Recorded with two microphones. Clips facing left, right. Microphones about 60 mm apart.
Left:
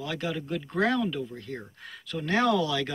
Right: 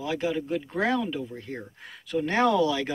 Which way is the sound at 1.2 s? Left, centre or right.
Right.